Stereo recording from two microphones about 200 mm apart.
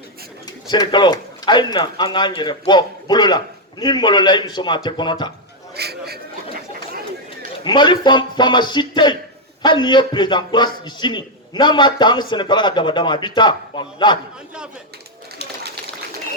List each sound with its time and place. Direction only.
0.4 s speech: 20° left (ahead or behind)
5.7 s a sound: 55° right (ahead or behind)
7.6 s speech: 25° left (ahead or behind)